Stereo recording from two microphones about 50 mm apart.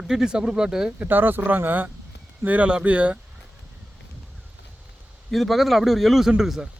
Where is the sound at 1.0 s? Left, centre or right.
Right.